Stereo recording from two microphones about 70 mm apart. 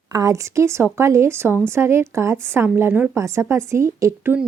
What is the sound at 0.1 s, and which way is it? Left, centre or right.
A woman's voice, right.